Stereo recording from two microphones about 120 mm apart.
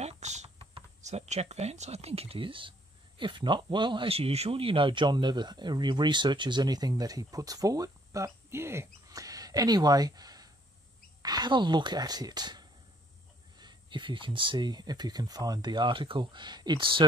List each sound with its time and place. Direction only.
0.0 s typing: 70° right (ahead or behind)
1.0 s speech: 70° right (ahead or behind); by 17.0 s 40° right (ahead or behind)